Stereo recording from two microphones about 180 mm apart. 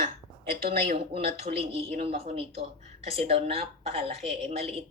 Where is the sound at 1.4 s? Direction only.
35° right (ahead or behind).